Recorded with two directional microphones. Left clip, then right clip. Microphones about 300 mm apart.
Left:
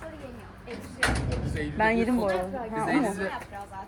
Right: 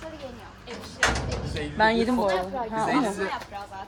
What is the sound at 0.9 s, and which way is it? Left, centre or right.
A woman's voice, right.